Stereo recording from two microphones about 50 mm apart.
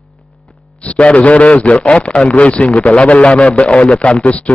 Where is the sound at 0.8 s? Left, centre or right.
Left.